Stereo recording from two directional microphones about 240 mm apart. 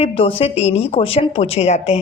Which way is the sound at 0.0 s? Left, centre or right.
Left.